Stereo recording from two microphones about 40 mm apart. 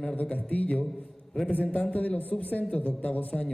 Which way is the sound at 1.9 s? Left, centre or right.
Left.